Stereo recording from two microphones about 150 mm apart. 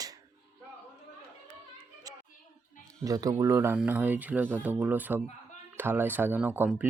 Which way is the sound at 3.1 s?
20° right (ahead or behind).